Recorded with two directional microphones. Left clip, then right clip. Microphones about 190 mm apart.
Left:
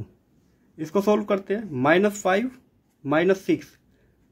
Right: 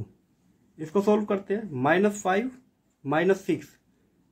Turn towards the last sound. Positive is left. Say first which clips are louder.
# left 3 dB
turn(degrees=20)  # may be behind; listen again after turning